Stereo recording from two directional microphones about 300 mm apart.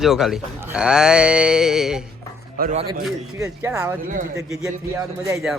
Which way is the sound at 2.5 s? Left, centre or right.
Right.